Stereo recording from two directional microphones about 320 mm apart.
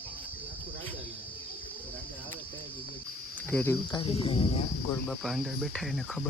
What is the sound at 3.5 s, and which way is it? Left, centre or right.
Speech, centre.